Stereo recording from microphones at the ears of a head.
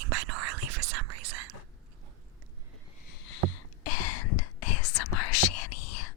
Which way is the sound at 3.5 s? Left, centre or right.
Left.